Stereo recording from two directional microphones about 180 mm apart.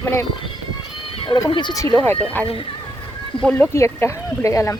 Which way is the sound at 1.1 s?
30° left (ahead or behind).